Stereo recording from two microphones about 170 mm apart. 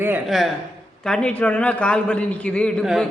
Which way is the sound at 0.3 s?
Centre (ahead or behind).